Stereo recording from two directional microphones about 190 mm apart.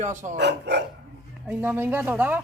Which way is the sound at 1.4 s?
10° right (ahead or behind).